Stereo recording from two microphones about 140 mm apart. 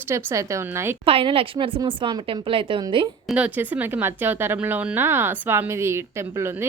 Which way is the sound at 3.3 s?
10° right (ahead or behind).